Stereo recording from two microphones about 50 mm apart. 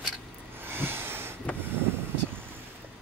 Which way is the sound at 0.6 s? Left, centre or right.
Right.